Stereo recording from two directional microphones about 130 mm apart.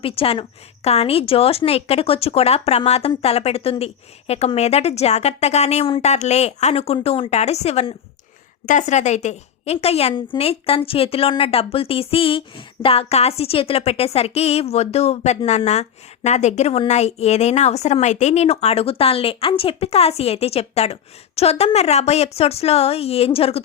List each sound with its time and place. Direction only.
0.0 s a woman's voice: 45° left (ahead or behind)
8.6 s a woman's voice: 70° left (ahead or behind); by 23.6 s 50° left (ahead or behind)